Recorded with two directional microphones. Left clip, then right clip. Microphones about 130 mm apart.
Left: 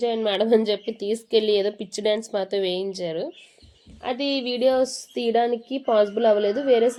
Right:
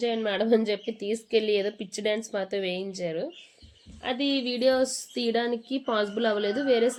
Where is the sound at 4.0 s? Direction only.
35° left (ahead or behind).